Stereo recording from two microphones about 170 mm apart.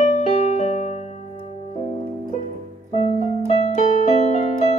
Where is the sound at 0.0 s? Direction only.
40° left (ahead or behind).